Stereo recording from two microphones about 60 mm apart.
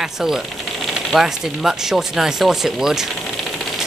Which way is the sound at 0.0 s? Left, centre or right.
Centre.